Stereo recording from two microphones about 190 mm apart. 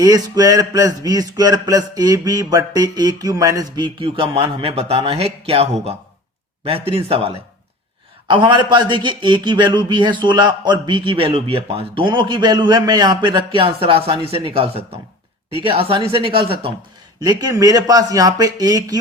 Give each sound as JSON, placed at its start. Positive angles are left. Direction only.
{"t": 0.0, "sound": "a man's voice", "side_deg": -20}
{"t": 8.3, "sound": "speech", "side_deg": -25}